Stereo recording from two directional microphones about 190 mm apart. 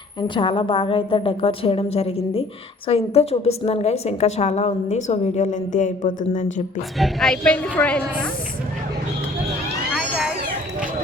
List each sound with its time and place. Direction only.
0.2 s a woman's voice: 25° left (ahead or behind); by 6.5 s 40° left (ahead or behind)
7.0 s a woman's voice: 5° left (ahead or behind)
9.9 s cat: centre (ahead or behind)